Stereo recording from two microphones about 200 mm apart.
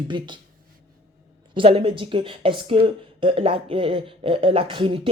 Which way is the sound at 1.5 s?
25° right (ahead or behind).